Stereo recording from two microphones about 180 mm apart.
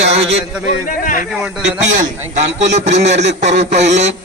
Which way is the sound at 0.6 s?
50° left (ahead or behind).